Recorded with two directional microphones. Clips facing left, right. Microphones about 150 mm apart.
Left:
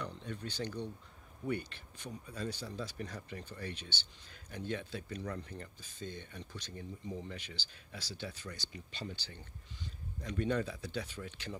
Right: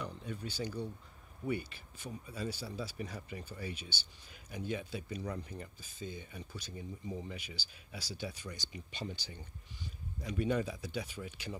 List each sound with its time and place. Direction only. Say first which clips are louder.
0.0 s speech: even; 5° right (ahead or behind)